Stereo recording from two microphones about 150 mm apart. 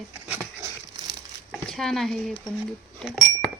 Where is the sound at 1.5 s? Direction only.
Centre (ahead or behind).